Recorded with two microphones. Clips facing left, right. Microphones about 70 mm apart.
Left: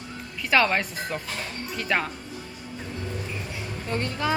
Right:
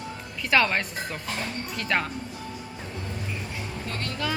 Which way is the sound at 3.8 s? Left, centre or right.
Left.